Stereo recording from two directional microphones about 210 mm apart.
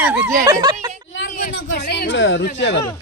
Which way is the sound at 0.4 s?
15° right (ahead or behind).